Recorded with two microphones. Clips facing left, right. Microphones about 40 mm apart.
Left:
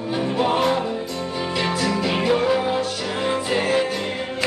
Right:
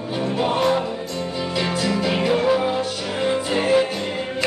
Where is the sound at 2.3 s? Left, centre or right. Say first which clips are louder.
Right 1 dB; centre.